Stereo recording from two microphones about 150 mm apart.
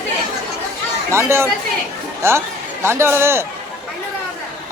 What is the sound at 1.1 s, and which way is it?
Speech, 15° right (ahead or behind).